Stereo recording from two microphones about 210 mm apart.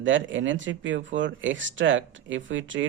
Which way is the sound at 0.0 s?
65° right (ahead or behind).